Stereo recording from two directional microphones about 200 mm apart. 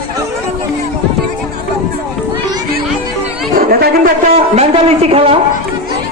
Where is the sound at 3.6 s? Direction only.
45° right (ahead or behind).